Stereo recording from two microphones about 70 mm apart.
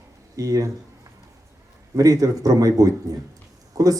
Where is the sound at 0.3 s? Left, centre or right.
Right.